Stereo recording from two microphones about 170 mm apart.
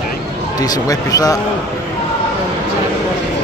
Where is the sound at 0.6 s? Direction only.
20° left (ahead or behind).